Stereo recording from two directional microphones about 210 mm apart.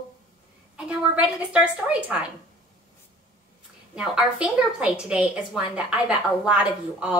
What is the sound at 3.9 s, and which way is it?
A woman's voice, 5° right (ahead or behind).